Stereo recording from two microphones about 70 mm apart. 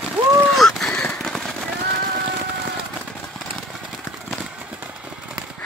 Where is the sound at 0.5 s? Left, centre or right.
Centre.